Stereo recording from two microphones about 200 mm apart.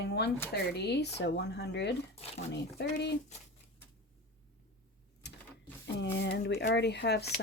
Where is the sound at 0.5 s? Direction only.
55° left (ahead or behind).